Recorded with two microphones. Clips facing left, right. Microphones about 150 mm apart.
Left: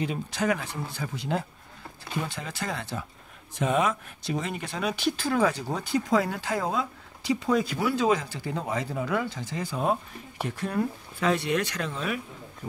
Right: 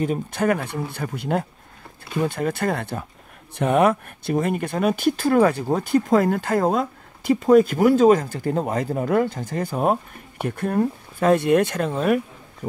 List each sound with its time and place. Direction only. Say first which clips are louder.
0.0 s speech: right 6 dB; 50° right (ahead or behind)